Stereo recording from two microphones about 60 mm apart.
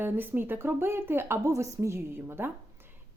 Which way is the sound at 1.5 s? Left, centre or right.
Right.